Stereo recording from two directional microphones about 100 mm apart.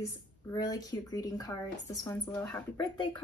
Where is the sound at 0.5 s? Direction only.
40° left (ahead or behind).